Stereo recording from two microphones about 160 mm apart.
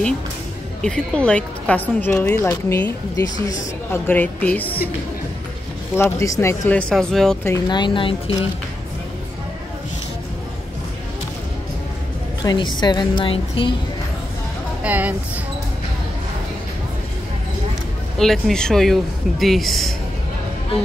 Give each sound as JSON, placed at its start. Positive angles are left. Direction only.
{"t": 0.8, "sound": "a woman's voice", "side_deg": 5}
{"t": 5.9, "sound": "a woman's voice", "side_deg": 15}
{"t": 7.4, "sound": "speech", "side_deg": 20}
{"t": 12.4, "sound": "a woman's voice", "side_deg": 25}
{"t": 14.8, "sound": "speech", "side_deg": -10}
{"t": 18.1, "sound": "speech", "side_deg": 0}